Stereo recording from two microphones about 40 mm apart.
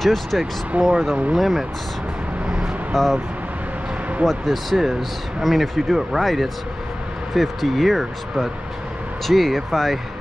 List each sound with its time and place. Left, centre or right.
0.0 s speech: centre
0.7 s speech: right
1.4 s speech: centre
2.9 s speech: centre
4.3 s speech: centre